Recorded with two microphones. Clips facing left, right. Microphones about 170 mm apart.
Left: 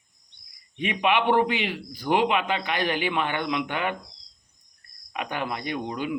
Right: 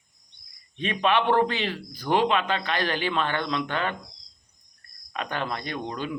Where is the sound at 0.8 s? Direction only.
15° left (ahead or behind).